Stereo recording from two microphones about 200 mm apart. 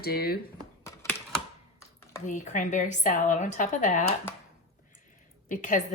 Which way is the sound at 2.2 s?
35° left (ahead or behind).